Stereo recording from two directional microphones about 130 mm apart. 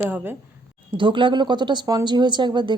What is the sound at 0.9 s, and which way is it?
Speech, 40° right (ahead or behind).